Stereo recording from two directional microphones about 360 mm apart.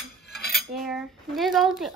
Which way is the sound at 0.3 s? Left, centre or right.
Centre.